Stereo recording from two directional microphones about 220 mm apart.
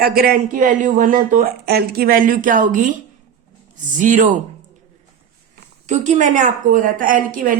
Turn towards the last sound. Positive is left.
turn(degrees=-40)  # may be behind; listen again after turning